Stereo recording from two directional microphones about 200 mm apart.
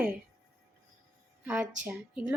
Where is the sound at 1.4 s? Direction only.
5° right (ahead or behind).